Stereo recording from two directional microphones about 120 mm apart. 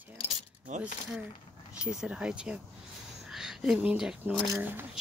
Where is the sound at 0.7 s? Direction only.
80° right.